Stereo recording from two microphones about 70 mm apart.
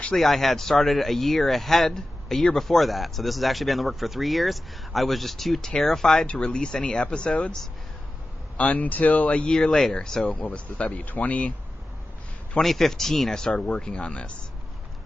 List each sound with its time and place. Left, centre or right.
0.2 s speech: centre
8.5 s speech: centre
12.5 s speech: centre